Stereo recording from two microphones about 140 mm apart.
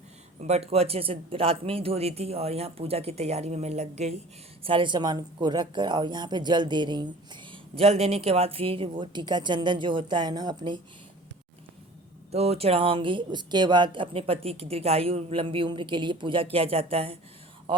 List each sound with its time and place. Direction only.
0.3 s speech: 50° right (ahead or behind)
4.6 s speech: 35° right (ahead or behind)
7.5 s speech: 45° right (ahead or behind); by 10.8 s 30° right (ahead or behind)
12.3 s speech: 45° right (ahead or behind)